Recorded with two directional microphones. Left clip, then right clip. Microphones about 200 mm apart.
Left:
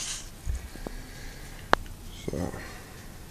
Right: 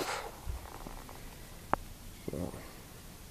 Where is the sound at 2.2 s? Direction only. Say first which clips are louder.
Left 6 dB; 5° left (ahead or behind).